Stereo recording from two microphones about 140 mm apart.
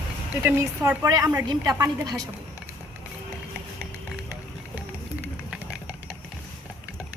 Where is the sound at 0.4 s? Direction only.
20° right (ahead or behind).